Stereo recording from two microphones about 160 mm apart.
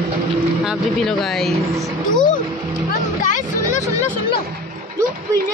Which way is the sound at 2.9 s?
55° left (ahead or behind).